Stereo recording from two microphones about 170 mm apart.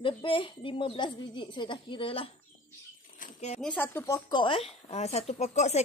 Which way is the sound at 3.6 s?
10° left (ahead or behind).